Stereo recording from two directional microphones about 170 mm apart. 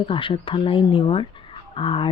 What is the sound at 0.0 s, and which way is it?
Speech, 30° left (ahead or behind).